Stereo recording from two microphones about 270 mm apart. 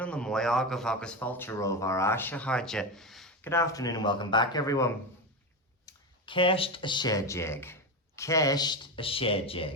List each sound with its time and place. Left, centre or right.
0.0 s a man's voice: centre